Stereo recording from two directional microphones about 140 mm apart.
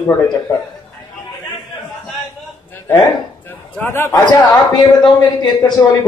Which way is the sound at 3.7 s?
15° left (ahead or behind).